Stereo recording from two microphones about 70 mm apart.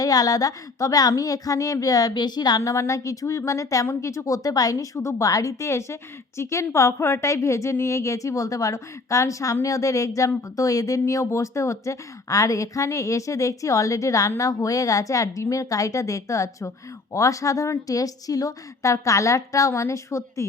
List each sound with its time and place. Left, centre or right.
0.0 s speech: left
2.6 s speech: left